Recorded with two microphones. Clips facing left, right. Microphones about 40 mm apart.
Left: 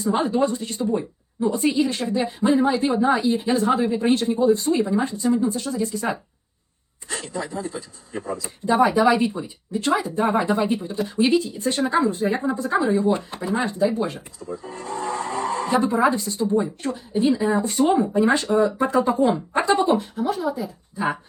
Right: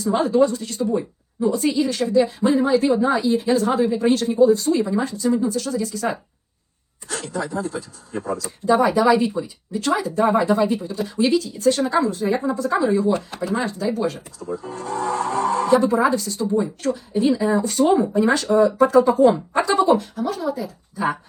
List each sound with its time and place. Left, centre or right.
0.2 s speech: centre
8.4 s speech: left
14.8 s music: right
15.7 s speech: left
17.6 s speech: centre